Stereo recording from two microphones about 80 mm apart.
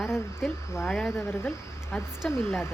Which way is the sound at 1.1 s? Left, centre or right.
Left.